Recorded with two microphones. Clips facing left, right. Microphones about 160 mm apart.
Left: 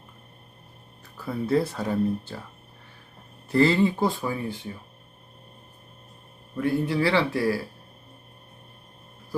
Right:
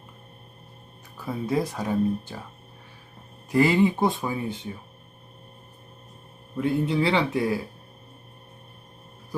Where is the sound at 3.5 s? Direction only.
15° right (ahead or behind).